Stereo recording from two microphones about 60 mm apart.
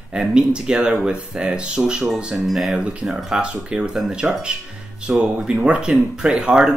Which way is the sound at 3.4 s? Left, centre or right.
Centre.